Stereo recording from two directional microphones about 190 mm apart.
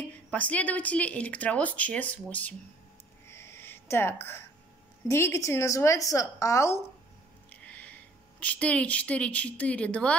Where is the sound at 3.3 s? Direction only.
15° left (ahead or behind).